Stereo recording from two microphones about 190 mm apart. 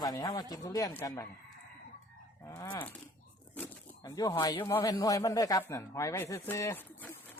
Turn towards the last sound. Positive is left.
turn(degrees=15)  # may be behind; listen again after turning